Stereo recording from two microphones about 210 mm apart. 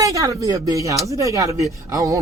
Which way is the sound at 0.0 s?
15° right (ahead or behind).